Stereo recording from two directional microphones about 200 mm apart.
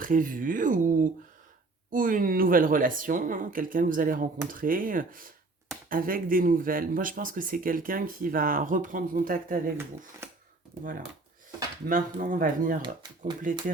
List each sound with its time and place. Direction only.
0.0 s speech: 40° right (ahead or behind)
10.2 s a sound: 10° right (ahead or behind)
11.9 s speech: 40° right (ahead or behind)
12.8 s speech: 25° right (ahead or behind)